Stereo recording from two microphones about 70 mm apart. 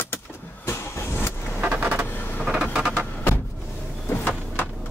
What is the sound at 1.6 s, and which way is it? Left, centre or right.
Vehicle, right.